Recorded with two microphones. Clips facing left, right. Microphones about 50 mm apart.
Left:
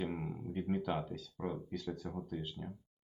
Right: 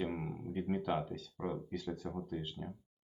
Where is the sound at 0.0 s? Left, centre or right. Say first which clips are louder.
Right 1 dB; centre.